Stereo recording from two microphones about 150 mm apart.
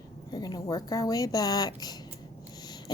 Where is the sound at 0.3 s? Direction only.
25° left (ahead or behind).